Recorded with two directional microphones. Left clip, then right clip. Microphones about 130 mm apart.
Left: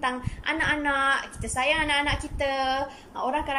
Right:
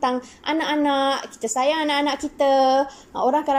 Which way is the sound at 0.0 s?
35° right (ahead or behind).